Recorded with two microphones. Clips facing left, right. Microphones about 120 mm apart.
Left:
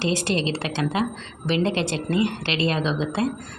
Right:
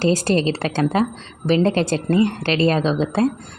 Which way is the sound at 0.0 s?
40° right (ahead or behind).